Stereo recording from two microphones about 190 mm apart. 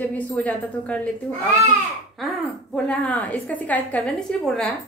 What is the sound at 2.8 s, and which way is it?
A woman's voice, 5° left (ahead or behind).